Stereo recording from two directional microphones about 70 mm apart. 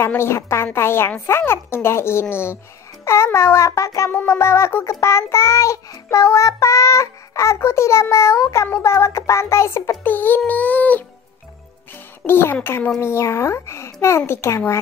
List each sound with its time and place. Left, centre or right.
0.0 s a woman's voice: left
4.3 s child singing: left
10.0 s music: left
12.3 s a woman's voice: left